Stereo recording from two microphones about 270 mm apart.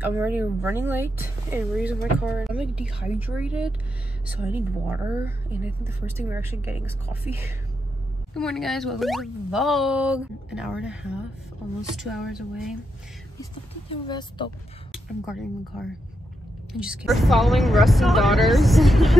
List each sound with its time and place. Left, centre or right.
0.0 s a woman's voice: centre
13.4 s speech: centre
14.9 s speech: centre